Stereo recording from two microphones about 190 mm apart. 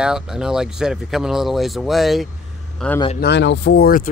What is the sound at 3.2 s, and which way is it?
Speech, 65° left (ahead or behind).